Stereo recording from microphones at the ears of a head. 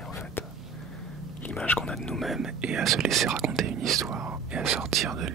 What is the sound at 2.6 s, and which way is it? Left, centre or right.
Whispering, right.